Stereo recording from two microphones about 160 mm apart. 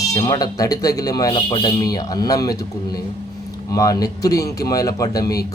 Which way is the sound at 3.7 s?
20° left (ahead or behind).